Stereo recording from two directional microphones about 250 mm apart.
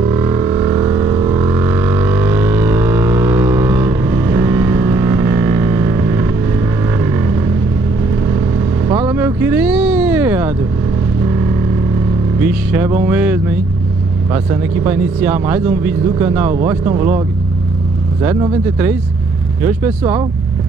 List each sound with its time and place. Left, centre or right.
0.0 s vehicle: centre
8.8 s vehicle: centre
12.4 s music: centre
14.3 s speech: centre
18.2 s speech: centre